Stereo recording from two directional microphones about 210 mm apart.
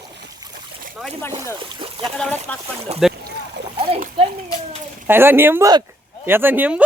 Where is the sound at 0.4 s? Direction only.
15° right (ahead or behind).